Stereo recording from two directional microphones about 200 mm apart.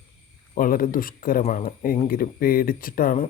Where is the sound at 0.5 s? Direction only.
45° left (ahead or behind).